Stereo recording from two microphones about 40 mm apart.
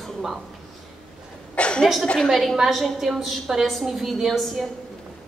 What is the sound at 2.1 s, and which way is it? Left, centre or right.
A woman's voice, centre.